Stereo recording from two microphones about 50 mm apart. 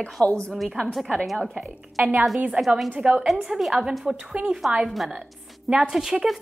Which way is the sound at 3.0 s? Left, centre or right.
Right.